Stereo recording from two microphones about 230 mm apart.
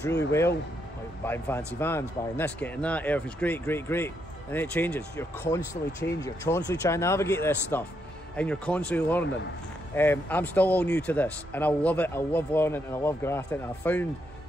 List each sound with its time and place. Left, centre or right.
0.0 s speech: left
1.2 s a man's voice: centre